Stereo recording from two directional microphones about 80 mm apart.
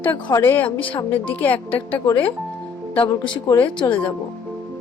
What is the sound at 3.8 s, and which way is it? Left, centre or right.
Speech, left.